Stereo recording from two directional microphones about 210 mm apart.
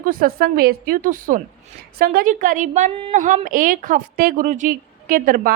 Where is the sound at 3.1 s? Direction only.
40° right (ahead or behind).